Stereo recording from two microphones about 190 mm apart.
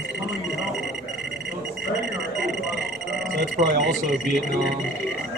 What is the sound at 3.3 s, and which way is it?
Speech, 65° right (ahead or behind).